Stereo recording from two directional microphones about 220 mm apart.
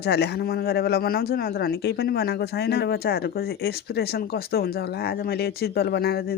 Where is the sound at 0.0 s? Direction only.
50° left (ahead or behind).